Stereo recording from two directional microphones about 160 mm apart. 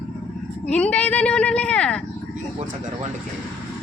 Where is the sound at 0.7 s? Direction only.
5° left (ahead or behind).